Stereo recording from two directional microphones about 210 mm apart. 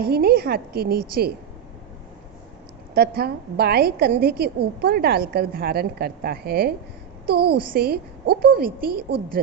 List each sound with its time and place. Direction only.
0.0 s a woman's voice: 50° right (ahead or behind)
2.9 s a woman's voice: 50° right (ahead or behind)